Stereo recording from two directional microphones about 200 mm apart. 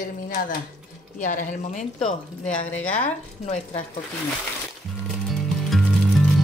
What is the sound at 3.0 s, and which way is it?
Speech, 35° left (ahead or behind).